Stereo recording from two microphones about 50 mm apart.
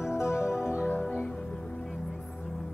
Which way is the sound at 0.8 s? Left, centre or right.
Left.